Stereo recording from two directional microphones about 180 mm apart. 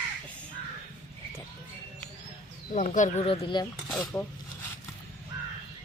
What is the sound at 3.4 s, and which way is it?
Speech, 25° left (ahead or behind).